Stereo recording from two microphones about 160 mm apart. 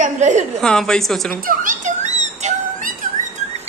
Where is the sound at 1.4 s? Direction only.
55° right (ahead or behind).